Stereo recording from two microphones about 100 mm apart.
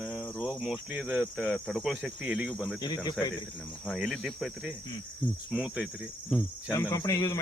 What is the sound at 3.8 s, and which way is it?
Speech, 5° right (ahead or behind).